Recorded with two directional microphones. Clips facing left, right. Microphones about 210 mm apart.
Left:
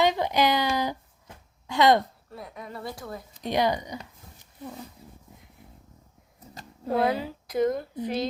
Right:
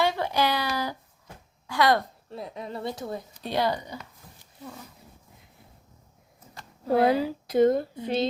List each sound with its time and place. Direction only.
0.0 s a sound: 15° left (ahead or behind)
1.6 s speech: 20° left (ahead or behind)
2.3 s speech: 25° right (ahead or behind)
3.4 s speech: 15° left (ahead or behind)
7.0 s speech: 30° right (ahead or behind)